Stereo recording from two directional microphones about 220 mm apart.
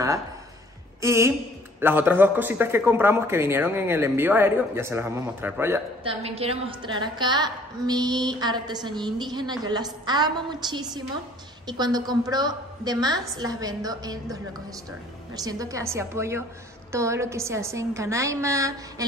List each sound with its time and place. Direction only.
1.0 s speech: 10° right (ahead or behind)
6.0 s a woman's voice: 25° right (ahead or behind)